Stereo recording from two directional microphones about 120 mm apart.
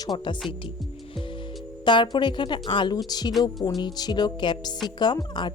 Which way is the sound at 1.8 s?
40° left (ahead or behind).